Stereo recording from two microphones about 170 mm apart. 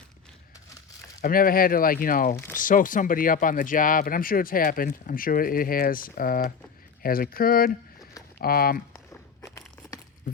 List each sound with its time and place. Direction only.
1.2 s speech: 55° left (ahead or behind)
2.3 s speech: 15° left (ahead or behind)
2.6 s speech: 50° left (ahead or behind)
9.4 s a sound: 20° left (ahead or behind)